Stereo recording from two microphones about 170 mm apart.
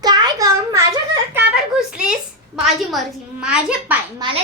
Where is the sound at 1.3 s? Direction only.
5° right (ahead or behind).